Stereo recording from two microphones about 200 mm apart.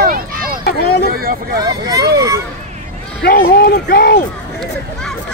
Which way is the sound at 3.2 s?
50° left (ahead or behind).